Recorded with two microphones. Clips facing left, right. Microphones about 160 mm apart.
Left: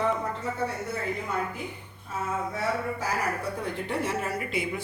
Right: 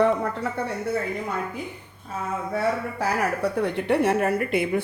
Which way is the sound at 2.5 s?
65° right (ahead or behind).